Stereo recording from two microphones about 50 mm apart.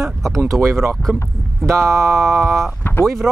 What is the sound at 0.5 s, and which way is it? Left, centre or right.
Speech, right.